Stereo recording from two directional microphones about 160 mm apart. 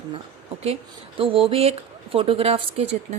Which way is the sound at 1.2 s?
35° right (ahead or behind).